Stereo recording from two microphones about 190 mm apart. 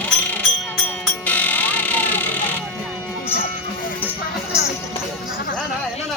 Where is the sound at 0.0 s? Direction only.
10° left (ahead or behind).